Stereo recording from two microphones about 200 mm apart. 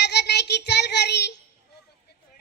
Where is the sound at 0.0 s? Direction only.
55° left (ahead or behind).